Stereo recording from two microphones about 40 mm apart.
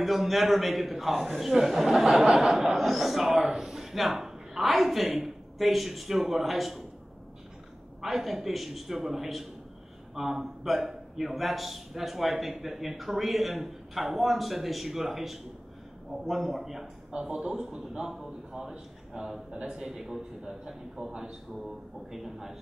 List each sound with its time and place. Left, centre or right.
0.0 s a man's voice: centre
8.0 s a man's voice: centre
16.8 s a man's voice: right
17.5 s a man's voice: centre